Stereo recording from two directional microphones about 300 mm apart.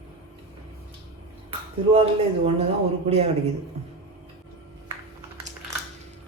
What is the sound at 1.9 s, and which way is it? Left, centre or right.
Speech, centre.